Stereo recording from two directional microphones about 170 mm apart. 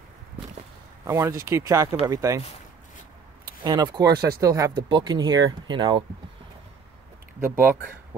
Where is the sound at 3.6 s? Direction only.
25° right (ahead or behind).